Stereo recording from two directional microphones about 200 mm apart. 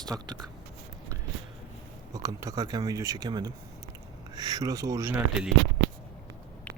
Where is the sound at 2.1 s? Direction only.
15° right (ahead or behind).